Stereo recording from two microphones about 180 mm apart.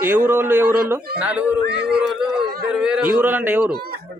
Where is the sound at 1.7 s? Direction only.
70° right (ahead or behind).